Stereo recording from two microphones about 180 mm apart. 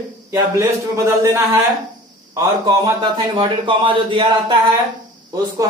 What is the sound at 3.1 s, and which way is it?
Speech, 25° right (ahead or behind).